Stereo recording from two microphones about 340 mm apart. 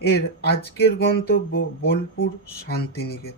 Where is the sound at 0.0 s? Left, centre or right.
Left.